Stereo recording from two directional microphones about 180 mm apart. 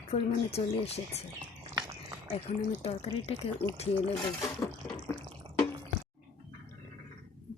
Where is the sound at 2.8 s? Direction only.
35° left (ahead or behind).